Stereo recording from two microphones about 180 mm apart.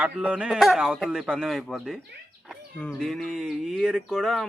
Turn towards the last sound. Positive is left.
turn(degrees=0)  # may be behind; listen again after turning